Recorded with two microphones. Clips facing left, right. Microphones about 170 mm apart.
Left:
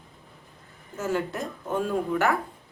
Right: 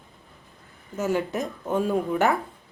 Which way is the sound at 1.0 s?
15° right (ahead or behind).